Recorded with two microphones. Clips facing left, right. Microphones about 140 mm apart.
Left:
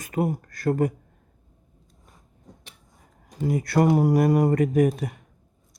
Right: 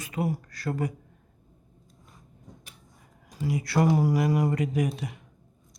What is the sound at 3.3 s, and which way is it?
Speech, 50° left (ahead or behind).